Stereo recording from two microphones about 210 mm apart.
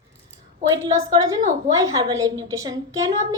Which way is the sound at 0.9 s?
15° right (ahead or behind).